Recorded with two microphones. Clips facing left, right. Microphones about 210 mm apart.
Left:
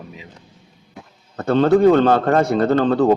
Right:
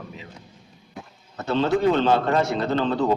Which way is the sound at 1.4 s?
55° left (ahead or behind).